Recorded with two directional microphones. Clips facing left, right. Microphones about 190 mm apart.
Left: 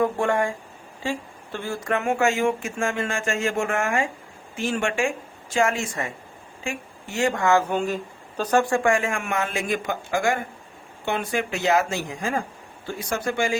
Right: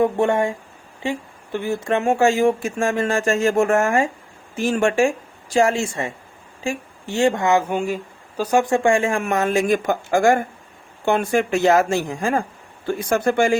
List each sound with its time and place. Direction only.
0.0 s speech: 25° right (ahead or behind)
1.5 s speech: 20° right (ahead or behind); by 13.6 s 55° right (ahead or behind)